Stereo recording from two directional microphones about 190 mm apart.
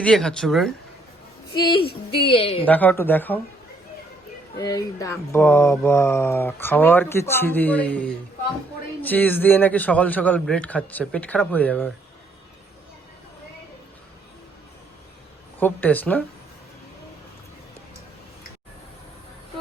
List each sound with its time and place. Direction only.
0.0 s speech: 5° left (ahead or behind)
1.5 s a woman's voice: 25° left (ahead or behind)
2.6 s speech: 10° left (ahead or behind)
4.5 s speech: 20° left (ahead or behind)
15.6 s speech: 10° left (ahead or behind)